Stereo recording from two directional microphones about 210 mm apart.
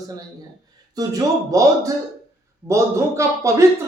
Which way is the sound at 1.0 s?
15° right (ahead or behind).